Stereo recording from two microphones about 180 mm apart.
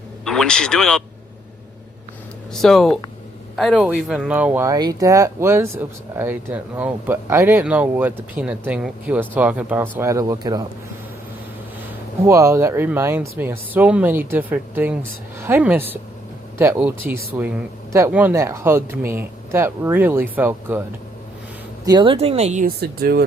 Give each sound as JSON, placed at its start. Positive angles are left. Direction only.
{"t": 0.3, "sound": "speech", "side_deg": 5}
{"t": 2.5, "sound": "speech", "side_deg": 0}
{"t": 12.2, "sound": "speech", "side_deg": -15}
{"t": 21.8, "sound": "speech", "side_deg": -25}
{"t": 22.6, "sound": "speech", "side_deg": -60}